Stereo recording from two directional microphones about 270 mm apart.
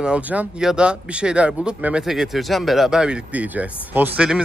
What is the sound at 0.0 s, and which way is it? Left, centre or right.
Speech, centre.